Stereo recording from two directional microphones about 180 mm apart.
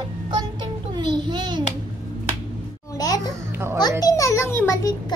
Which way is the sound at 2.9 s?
20° left (ahead or behind).